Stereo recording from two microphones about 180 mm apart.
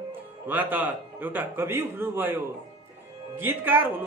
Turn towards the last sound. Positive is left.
turn(degrees=-10)  # may be behind; listen again after turning